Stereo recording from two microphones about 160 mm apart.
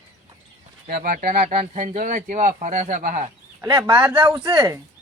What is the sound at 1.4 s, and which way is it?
Speech, 45° right (ahead or behind).